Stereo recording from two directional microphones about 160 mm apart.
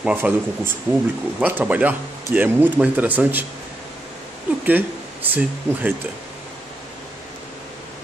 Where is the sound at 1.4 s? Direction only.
10° right (ahead or behind).